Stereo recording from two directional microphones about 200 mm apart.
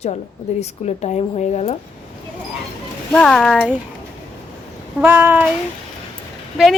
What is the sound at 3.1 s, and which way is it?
Speech, 5° left (ahead or behind).